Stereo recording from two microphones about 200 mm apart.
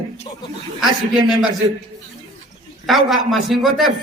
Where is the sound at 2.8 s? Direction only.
Centre (ahead or behind).